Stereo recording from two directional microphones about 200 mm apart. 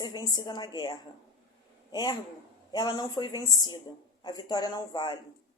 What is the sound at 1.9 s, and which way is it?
A man's voice, 20° left (ahead or behind).